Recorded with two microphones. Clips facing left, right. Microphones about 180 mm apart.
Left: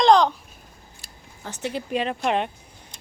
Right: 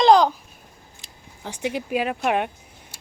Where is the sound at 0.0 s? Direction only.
5° right (ahead or behind).